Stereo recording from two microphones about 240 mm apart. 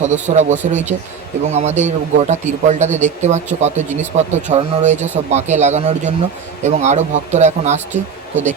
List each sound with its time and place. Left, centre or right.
0.3 s a man's voice: right